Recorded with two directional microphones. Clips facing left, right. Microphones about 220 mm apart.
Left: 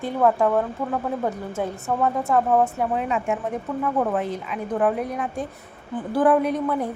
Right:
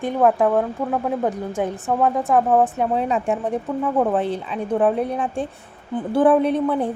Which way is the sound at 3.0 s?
35° right (ahead or behind).